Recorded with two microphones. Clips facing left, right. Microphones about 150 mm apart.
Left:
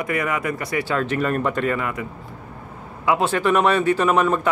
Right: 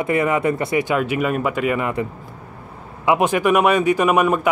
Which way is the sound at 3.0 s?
15° right (ahead or behind).